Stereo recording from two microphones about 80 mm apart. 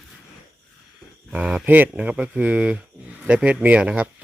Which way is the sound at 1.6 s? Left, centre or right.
Right.